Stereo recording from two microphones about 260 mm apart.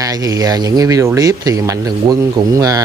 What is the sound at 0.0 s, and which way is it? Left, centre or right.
Speech, centre.